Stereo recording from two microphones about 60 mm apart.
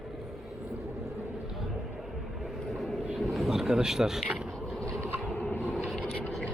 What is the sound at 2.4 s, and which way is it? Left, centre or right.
Vehicle, centre.